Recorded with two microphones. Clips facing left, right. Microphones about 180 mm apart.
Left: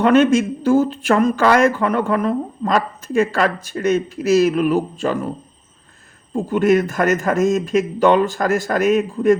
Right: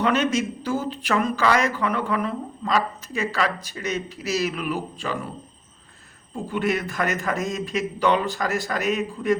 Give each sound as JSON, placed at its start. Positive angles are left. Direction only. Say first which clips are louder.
{"t": 0.0, "sound": "speech", "louder": "left 8 dB", "side_deg": 50}
{"t": 6.3, "sound": "speech", "louder": "left 9 dB", "side_deg": 45}